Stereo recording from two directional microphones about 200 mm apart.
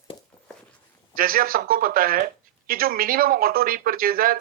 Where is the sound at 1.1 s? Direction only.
45° right (ahead or behind).